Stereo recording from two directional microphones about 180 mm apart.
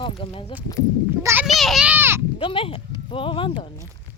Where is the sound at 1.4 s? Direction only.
Centre (ahead or behind).